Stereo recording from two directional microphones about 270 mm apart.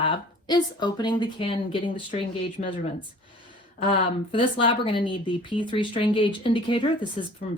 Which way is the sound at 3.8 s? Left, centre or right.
Centre.